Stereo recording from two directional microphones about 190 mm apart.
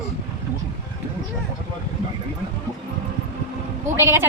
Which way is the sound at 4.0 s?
15° right (ahead or behind).